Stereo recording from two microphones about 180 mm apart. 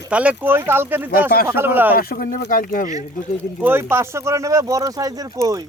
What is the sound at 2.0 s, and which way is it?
Speech, 55° left (ahead or behind).